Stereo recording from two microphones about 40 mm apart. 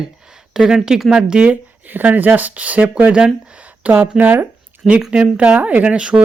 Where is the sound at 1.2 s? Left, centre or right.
Right.